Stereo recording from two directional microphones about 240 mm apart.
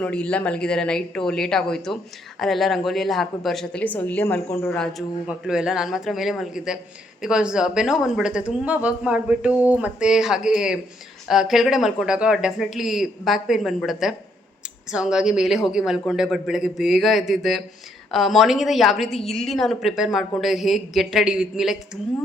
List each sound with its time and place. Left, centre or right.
0.0 s speech: centre